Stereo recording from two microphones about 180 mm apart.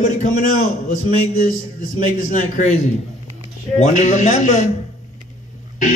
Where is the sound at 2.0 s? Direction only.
40° left (ahead or behind).